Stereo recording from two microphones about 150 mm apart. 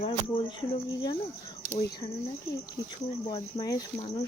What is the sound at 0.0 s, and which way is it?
Speech, 35° left (ahead or behind).